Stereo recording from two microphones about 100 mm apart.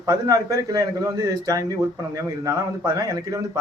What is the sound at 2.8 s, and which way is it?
Speech, 35° right (ahead or behind).